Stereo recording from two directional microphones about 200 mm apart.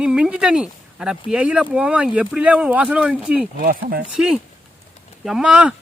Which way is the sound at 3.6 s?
45° right (ahead or behind).